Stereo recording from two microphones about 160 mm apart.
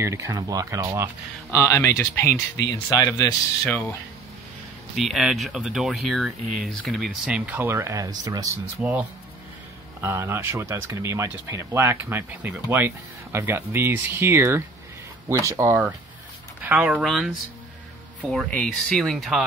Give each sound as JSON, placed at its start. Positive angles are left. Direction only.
{"t": 0.0, "sound": "speech", "side_deg": -20}
{"t": 1.5, "sound": "speech", "side_deg": 20}
{"t": 4.9, "sound": "speech", "side_deg": 0}
{"t": 8.8, "sound": "speech", "side_deg": -5}
{"t": 10.0, "sound": "speech", "side_deg": -15}
{"t": 18.5, "sound": "speech", "side_deg": 5}